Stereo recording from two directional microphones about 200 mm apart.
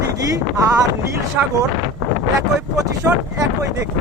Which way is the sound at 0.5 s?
15° right (ahead or behind).